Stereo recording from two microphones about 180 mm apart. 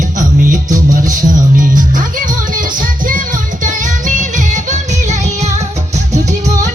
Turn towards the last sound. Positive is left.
turn(degrees=-45)  # may be behind; listen again after turning